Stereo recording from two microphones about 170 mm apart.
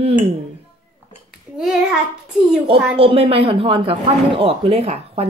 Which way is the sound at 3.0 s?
35° right (ahead or behind).